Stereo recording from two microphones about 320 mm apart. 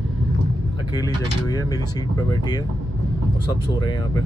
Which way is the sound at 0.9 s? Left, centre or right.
Centre.